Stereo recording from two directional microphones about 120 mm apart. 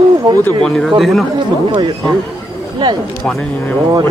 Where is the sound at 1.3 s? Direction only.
40° right (ahead or behind).